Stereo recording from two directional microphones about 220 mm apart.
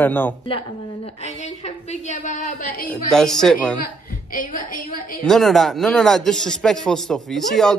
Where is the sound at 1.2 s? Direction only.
30° left (ahead or behind).